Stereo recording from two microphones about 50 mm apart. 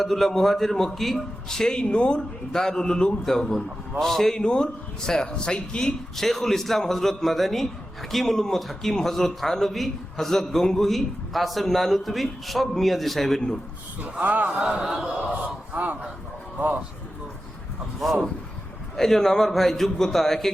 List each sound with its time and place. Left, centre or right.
0.0 s a man's voice: centre
6.1 s a man's voice: centre
14.0 s a man's voice: right
14.6 s a man's voice: centre
15.3 s gasp: right
16.6 s a man's voice: right
18.0 s a man's voice: centre